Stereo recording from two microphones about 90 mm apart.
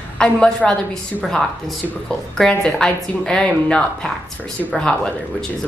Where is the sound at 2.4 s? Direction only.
5° left (ahead or behind).